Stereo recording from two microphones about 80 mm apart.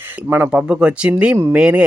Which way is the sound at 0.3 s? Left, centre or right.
Right.